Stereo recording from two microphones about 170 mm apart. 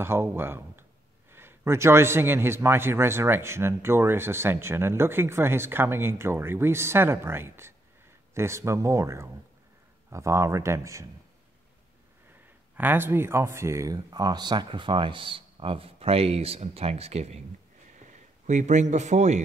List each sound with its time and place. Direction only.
0.0 s a man's voice: 15° right (ahead or behind)
12.7 s a man's voice: 10° right (ahead or behind); by 19.4 s 45° right (ahead or behind)